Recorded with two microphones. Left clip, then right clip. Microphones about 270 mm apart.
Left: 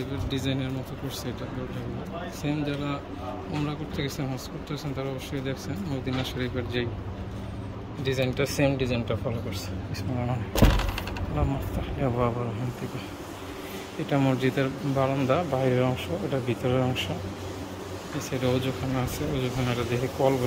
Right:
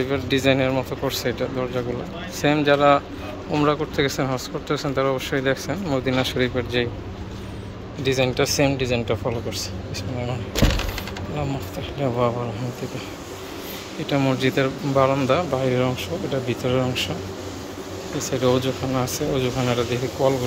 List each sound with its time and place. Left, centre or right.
0.0 s speech: centre
2.4 s speech: centre
8.0 s speech: centre
12.0 s speech: centre
14.0 s speech: centre
18.2 s speech: centre